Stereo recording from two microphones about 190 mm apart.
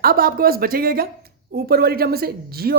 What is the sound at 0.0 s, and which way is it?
Speech, 50° right (ahead or behind).